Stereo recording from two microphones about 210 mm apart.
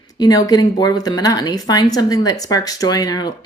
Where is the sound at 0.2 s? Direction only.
15° left (ahead or behind).